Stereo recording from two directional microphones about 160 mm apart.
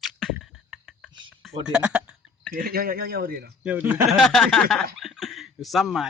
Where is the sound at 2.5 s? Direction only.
65° right (ahead or behind).